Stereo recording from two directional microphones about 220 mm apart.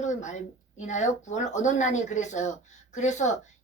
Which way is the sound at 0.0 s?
35° left (ahead or behind).